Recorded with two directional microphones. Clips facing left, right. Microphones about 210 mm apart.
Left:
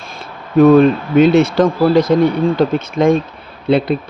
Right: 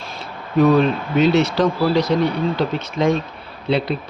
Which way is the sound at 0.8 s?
55° left (ahead or behind).